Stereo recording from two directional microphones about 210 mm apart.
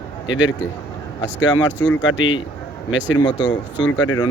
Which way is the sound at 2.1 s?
90° left.